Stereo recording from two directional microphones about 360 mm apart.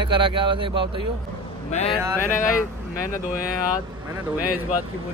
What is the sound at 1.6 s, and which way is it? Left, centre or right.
Speech, centre.